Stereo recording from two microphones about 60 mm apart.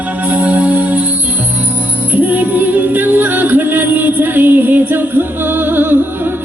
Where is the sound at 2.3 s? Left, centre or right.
Right.